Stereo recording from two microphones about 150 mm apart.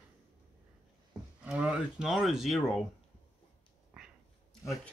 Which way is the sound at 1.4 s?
5° right (ahead or behind).